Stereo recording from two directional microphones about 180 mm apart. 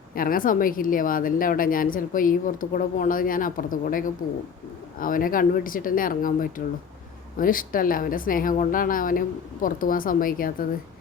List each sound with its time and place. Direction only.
0.1 s speech: 50° left (ahead or behind)